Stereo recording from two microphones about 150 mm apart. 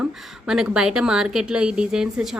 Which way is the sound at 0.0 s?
5° right (ahead or behind).